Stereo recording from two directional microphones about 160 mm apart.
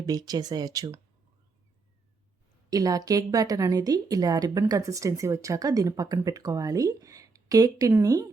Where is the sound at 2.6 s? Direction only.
25° right (ahead or behind).